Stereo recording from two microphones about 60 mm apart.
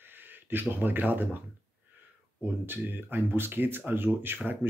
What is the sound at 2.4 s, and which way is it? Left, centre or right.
Speech, right.